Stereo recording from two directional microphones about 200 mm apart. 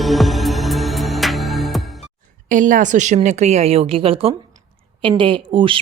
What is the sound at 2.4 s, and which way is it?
A woman's voice, 40° right (ahead or behind).